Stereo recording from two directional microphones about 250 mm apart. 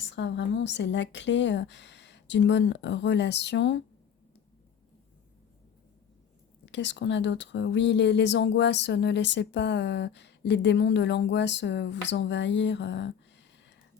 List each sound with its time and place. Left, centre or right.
0.0 s speech: left
6.7 s speech: left